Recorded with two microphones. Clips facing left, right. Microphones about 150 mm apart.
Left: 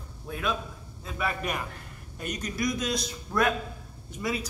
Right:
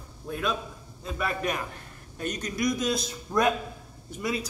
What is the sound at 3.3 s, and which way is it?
Speech, 15° right (ahead or behind).